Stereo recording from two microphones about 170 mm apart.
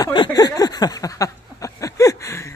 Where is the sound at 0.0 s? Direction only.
25° left (ahead or behind).